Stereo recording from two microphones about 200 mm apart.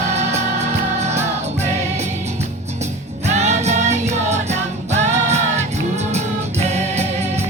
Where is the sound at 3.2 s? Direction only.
35° right (ahead or behind).